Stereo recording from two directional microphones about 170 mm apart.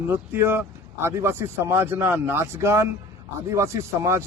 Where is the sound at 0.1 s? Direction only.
10° right (ahead or behind).